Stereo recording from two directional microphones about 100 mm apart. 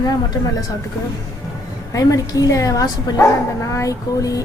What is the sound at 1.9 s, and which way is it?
Speech, 35° left (ahead or behind).